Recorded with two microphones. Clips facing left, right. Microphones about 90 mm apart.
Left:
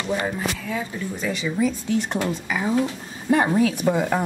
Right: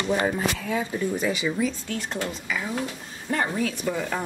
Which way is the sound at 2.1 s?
45° left (ahead or behind).